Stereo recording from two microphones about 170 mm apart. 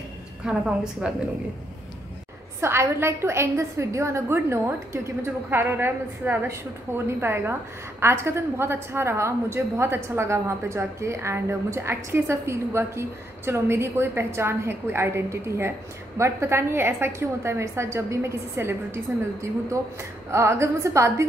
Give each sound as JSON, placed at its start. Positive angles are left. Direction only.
{"t": 0.5, "sound": "a woman's voice", "side_deg": -5}
{"t": 2.6, "sound": "a woman's voice", "side_deg": -15}